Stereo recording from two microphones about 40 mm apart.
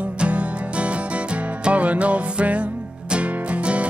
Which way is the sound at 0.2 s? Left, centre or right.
Right.